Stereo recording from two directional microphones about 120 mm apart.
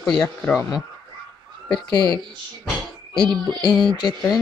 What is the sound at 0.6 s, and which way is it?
Speech, 30° left (ahead or behind).